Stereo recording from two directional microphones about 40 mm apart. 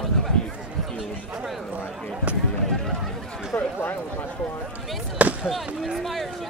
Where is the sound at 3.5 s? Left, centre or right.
Left.